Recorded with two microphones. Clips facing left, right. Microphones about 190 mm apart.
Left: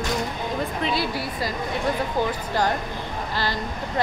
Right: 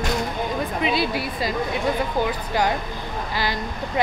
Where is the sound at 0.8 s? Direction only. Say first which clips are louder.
Right 3 dB; 20° right (ahead or behind).